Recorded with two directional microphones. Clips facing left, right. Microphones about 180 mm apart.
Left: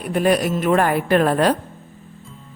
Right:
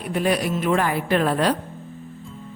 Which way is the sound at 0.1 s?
50° left (ahead or behind).